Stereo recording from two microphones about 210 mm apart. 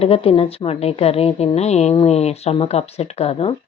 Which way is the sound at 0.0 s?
30° left (ahead or behind).